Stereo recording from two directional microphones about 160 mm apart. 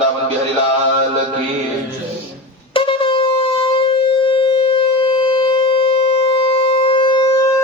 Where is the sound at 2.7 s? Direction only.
30° left (ahead or behind).